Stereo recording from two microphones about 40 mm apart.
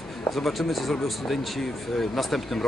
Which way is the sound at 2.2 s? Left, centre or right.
Centre.